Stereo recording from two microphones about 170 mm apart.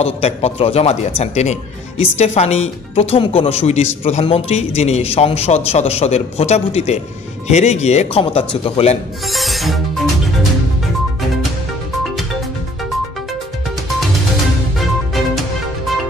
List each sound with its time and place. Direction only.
0.0 s speech: 35° left (ahead or behind)
9.3 s music: centre (ahead or behind)